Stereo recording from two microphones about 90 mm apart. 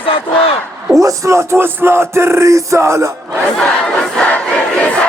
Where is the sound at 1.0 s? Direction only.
35° right (ahead or behind).